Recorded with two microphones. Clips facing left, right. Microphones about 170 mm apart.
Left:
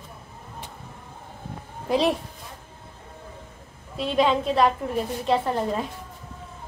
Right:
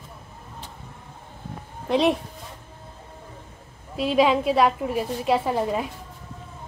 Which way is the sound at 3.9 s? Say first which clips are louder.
Right 2 dB; 5° right (ahead or behind).